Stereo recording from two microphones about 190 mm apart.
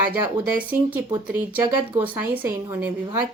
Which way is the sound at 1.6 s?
20° right (ahead or behind).